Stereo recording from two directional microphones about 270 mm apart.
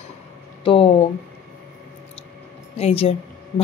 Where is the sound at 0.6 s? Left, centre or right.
Centre.